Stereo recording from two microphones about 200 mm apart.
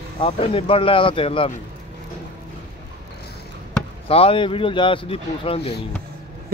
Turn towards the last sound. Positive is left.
turn(degrees=30)  # may be behind; listen again after turning